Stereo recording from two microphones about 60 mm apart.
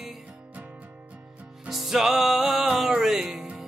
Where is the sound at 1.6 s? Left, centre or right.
Centre.